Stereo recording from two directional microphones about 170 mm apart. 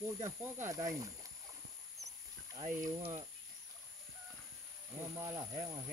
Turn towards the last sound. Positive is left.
turn(degrees=-20)  # may be behind; listen again after turning